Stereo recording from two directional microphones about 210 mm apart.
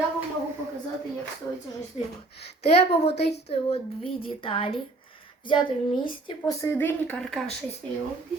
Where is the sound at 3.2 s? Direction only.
50° left (ahead or behind).